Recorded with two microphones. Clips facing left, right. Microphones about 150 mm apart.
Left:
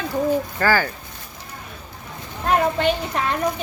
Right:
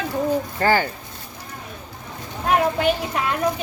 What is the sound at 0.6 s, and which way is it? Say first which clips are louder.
Speech: right 1 dB; 20° right (ahead or behind).